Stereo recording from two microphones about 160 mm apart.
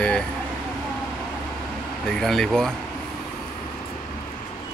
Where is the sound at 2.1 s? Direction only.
5° left (ahead or behind).